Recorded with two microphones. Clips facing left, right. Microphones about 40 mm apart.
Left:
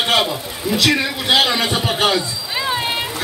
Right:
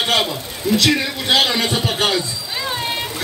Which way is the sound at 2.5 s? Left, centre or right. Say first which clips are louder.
Left 3 dB; centre.